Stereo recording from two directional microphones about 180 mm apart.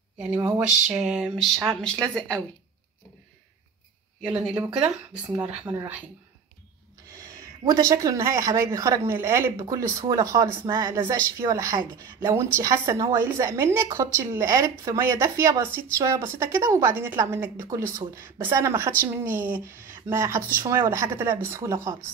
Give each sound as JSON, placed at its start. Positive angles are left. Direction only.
{"t": 0.2, "sound": "a woman's voice", "side_deg": -10}
{"t": 0.9, "sound": "a sound", "side_deg": 0}
{"t": 5.7, "sound": "a woman's voice", "side_deg": -10}
{"t": 7.1, "sound": "a woman's voice", "side_deg": -15}